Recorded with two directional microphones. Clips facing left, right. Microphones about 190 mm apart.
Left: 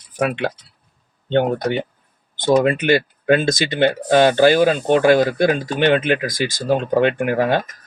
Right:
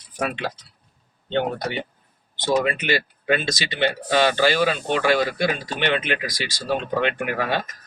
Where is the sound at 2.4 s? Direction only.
50° left (ahead or behind).